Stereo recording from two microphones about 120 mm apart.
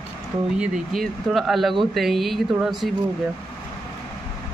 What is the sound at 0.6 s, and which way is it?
Speech, centre (ahead or behind).